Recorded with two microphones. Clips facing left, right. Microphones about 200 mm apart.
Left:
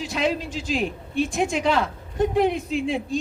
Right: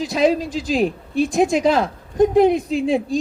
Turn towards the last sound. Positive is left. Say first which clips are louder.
# right 5 dB
turn(degrees=-35)  # may be behind; listen again after turning